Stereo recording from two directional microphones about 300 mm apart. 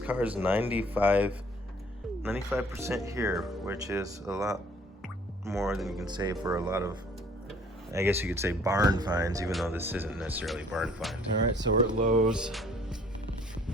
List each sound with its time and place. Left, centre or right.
0.0 s speech: centre
6.6 s speech: centre
7.9 s speech: centre
9.5 s speech: centre
11.5 s speech: right
12.3 s music: centre